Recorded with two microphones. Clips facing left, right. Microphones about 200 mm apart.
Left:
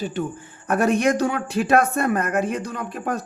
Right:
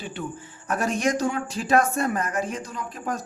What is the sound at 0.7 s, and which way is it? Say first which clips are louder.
Speech: left 5 dB; 60° left (ahead or behind).